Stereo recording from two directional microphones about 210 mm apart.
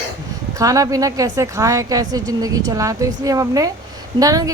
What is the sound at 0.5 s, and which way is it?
A woman's voice, 15° right (ahead or behind).